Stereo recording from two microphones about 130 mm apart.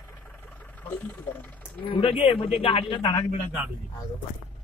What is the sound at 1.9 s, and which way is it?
Speech, 45° left (ahead or behind).